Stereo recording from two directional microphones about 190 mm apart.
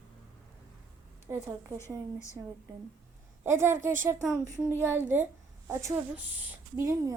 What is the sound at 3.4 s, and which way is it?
Speech, 15° right (ahead or behind).